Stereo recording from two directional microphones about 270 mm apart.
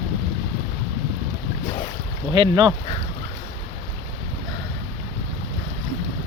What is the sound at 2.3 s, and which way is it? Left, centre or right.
Speech, centre.